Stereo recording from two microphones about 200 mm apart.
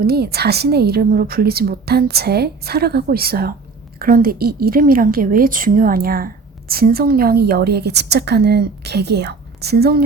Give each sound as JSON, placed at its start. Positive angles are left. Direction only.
{"t": 0.0, "sound": "a woman's voice", "side_deg": -50}